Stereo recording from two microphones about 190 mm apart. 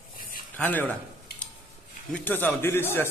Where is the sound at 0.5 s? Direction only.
10° left (ahead or behind).